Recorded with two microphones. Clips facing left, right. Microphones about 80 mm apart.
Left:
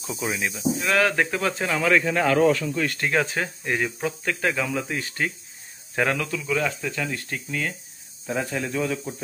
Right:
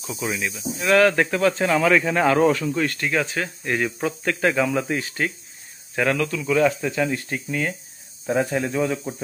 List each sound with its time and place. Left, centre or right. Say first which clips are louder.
0.2 s speech: right 1 dB; left
0.7 s speech: right 6 dB; centre
3.0 s speech: even; left
3.6 s speech: right 3 dB; centre
5.9 s speech: right 2 dB; centre
6.4 s speech: right 9 dB; centre
8.3 s speech: right 5 dB; right